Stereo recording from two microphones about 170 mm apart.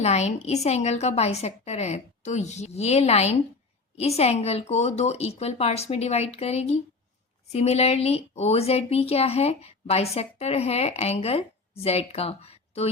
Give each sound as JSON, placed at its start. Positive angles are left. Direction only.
{"t": 0.0, "sound": "a woman's voice", "side_deg": 40}